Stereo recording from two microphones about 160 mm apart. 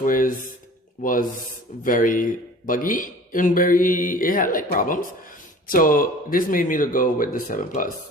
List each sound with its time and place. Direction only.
0.0 s speech: 60° left (ahead or behind)